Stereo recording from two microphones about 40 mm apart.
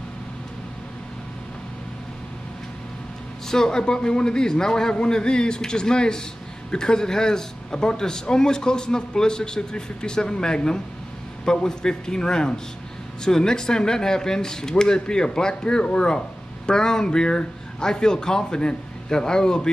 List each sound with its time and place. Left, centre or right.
3.4 s a man's voice: centre